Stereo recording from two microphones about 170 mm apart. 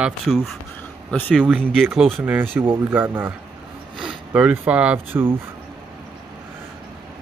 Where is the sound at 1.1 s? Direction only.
5° left (ahead or behind); by 5.3 s 10° right (ahead or behind).